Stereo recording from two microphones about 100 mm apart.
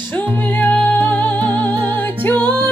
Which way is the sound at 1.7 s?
50° right (ahead or behind).